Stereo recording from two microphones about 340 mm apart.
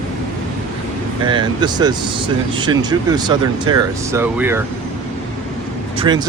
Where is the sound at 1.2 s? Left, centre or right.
Centre.